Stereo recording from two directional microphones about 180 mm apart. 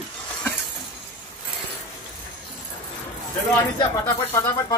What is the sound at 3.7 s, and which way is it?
Speech, 20° left (ahead or behind).